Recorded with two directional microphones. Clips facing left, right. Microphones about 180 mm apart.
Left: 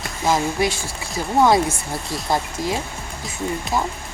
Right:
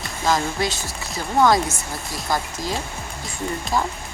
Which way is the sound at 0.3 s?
10° left (ahead or behind).